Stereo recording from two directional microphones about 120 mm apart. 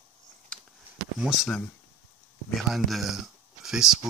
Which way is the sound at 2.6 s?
Centre (ahead or behind).